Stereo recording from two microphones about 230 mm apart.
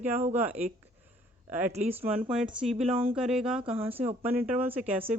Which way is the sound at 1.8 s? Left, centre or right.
Centre.